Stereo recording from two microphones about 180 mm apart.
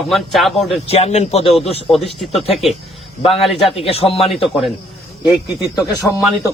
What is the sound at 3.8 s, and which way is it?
Speech, 35° left (ahead or behind).